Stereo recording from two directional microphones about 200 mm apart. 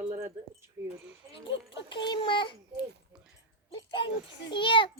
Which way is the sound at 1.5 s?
65° left (ahead or behind).